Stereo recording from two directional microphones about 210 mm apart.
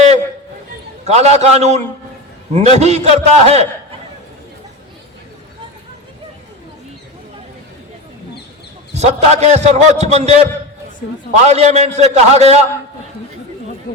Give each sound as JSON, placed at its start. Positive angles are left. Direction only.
{"t": 1.0, "sound": "a man's voice", "side_deg": -30}
{"t": 9.0, "sound": "a man's voice", "side_deg": -30}
{"t": 13.9, "sound": "speech", "side_deg": 45}